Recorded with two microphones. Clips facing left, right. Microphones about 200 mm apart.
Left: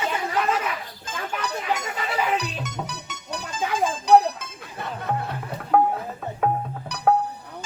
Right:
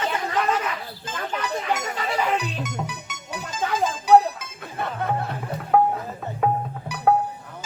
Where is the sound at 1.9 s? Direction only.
5° left (ahead or behind).